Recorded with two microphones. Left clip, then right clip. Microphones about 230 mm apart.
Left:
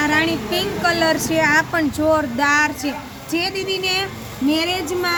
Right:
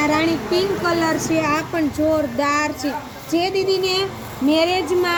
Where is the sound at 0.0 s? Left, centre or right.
Left.